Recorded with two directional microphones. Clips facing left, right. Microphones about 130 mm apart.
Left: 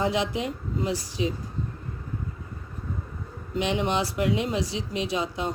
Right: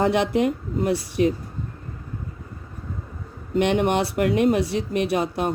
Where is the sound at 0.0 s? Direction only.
60° right (ahead or behind).